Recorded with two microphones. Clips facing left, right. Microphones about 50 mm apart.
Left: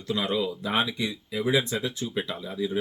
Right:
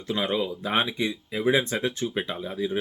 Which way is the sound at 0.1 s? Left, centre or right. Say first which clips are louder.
Right 1 dB; right.